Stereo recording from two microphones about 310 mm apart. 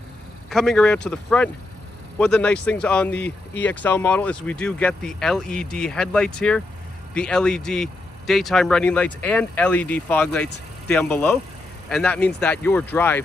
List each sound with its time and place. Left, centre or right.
0.5 s speech: centre